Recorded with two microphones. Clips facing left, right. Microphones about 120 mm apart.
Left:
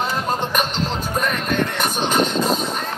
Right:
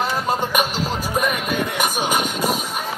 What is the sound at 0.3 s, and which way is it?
Music, 10° right (ahead or behind).